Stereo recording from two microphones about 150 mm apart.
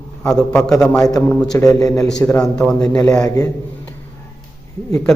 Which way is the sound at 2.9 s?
20° left (ahead or behind).